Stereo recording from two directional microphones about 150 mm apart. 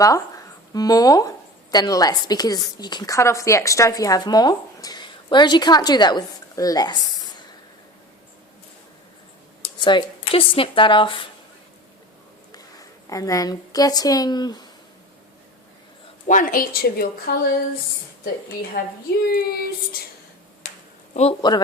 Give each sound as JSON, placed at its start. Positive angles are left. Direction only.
{"t": 0.7, "sound": "a woman's voice", "side_deg": 25}
{"t": 9.8, "sound": "speech", "side_deg": 35}
{"t": 12.5, "sound": "a woman's voice", "side_deg": 25}
{"t": 16.2, "sound": "speech", "side_deg": 60}
{"t": 18.8, "sound": "speech", "side_deg": 75}
{"t": 19.3, "sound": "child singing", "side_deg": 85}
{"t": 21.1, "sound": "a man's voice", "side_deg": 45}